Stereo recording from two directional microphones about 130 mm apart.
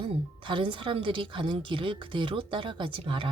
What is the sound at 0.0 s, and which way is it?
Speech, 40° right (ahead or behind).